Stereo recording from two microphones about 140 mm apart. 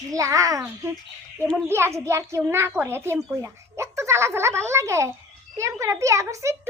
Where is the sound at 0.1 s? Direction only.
25° right (ahead or behind).